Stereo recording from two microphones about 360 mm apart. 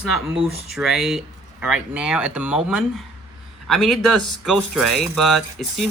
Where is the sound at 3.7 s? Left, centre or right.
Centre.